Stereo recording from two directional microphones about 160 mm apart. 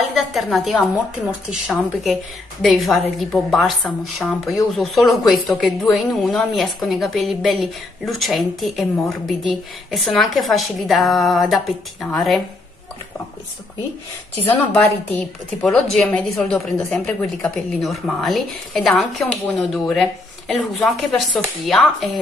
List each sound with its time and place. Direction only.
0.1 s a woman's voice: centre (ahead or behind)
14.5 s a woman's voice: 10° left (ahead or behind)